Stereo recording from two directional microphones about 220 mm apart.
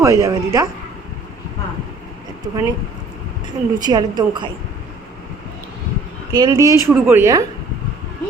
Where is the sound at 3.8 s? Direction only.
20° right (ahead or behind).